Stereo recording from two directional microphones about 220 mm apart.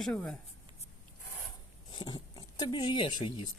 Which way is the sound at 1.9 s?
20° left (ahead or behind).